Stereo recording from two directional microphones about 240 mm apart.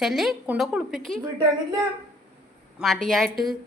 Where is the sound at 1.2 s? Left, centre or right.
Centre.